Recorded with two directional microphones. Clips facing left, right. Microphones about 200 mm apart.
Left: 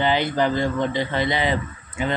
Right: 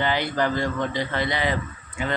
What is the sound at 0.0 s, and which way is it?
A man's voice, 20° left (ahead or behind).